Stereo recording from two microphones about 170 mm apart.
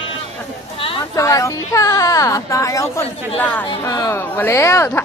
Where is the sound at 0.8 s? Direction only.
30° left (ahead or behind).